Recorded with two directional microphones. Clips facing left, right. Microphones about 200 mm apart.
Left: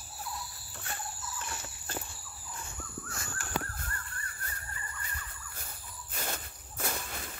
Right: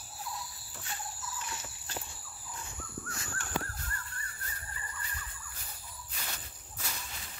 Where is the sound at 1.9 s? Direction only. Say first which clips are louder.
Left 3 dB; 55° left (ahead or behind).